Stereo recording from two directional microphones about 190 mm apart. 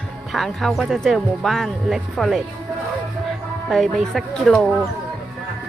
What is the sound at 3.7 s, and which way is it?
Speech, centre (ahead or behind).